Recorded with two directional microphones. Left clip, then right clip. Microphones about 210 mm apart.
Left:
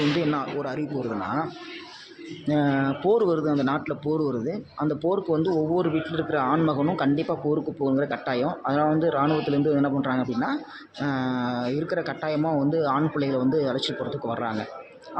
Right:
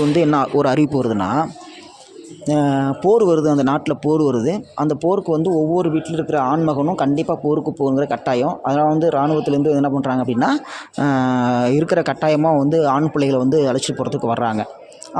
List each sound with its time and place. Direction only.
0.2 s speech: 45° right (ahead or behind)
2.5 s speech: 35° right (ahead or behind)